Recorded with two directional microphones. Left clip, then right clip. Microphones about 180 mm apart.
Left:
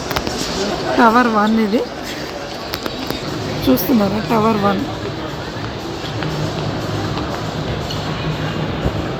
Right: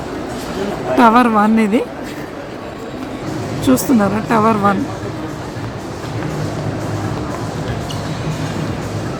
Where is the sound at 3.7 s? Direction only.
Centre (ahead or behind).